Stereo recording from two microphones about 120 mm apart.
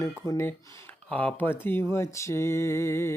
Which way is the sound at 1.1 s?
10° left (ahead or behind).